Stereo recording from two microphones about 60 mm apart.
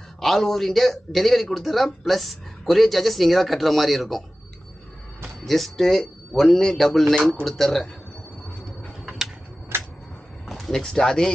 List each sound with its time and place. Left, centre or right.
0.2 s a man's voice: centre
5.4 s a man's voice: centre
9.7 s a sound: right
10.5 s speech: centre